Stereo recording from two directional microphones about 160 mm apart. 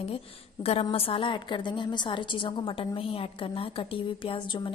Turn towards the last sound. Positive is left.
turn(degrees=35)  # may be behind; listen again after turning